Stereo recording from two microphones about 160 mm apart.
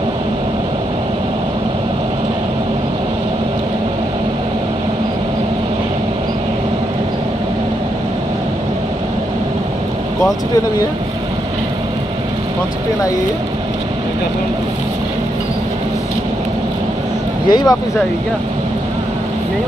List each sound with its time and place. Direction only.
17.5 s speech: 25° left (ahead or behind)